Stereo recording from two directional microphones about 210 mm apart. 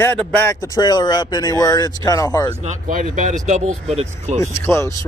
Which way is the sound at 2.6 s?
35° right (ahead or behind).